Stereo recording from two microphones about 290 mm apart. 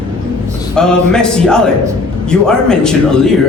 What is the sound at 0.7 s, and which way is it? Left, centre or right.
Speech, centre.